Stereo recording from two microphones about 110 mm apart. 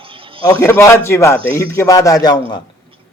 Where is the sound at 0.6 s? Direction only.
25° left (ahead or behind); by 2.6 s 40° left (ahead or behind).